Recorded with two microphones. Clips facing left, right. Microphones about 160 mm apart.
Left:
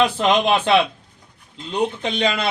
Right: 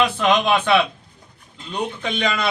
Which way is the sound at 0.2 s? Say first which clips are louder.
Left 1 dB; 30° left (ahead or behind).